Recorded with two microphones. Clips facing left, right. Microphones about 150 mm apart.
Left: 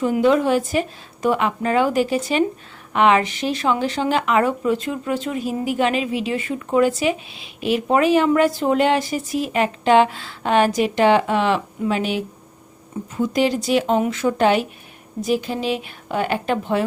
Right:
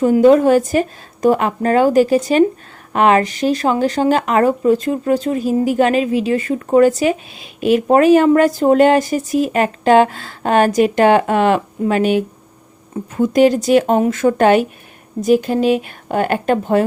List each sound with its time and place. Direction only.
0.0 s speech: 40° right (ahead or behind)